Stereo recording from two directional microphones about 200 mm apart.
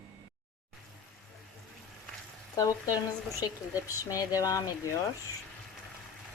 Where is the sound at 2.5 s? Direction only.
20° left (ahead or behind).